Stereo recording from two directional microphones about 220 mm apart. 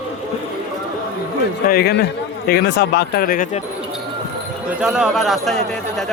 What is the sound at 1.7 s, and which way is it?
Speech, 45° left (ahead or behind).